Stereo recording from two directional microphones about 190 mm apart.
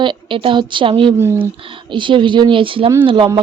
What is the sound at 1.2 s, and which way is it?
Speech, 10° right (ahead or behind).